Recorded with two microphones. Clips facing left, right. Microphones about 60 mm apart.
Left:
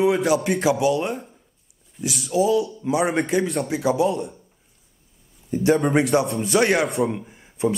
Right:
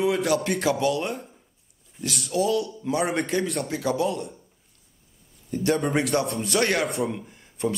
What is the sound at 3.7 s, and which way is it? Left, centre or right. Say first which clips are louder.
Speech: left 6 dB; centre.